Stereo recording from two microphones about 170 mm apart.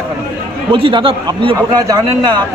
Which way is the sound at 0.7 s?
30° right (ahead or behind).